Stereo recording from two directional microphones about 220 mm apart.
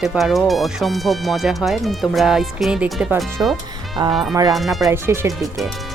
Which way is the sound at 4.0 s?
20° right (ahead or behind).